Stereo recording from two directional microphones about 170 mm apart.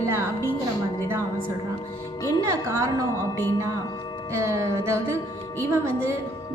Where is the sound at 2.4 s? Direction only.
15° right (ahead or behind).